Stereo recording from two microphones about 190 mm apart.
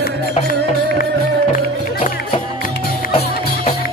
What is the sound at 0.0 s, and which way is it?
Music, 50° left (ahead or behind).